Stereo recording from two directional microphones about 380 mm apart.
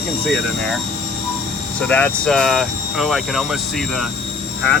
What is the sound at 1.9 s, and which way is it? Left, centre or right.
Speech, centre.